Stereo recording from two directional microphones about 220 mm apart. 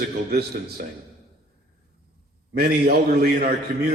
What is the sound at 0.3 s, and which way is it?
Speech, 40° right (ahead or behind).